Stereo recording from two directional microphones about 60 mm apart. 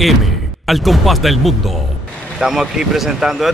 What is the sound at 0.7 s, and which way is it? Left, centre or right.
Speech, centre.